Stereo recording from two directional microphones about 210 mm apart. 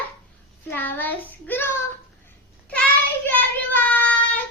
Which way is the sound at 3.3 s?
10° left (ahead or behind).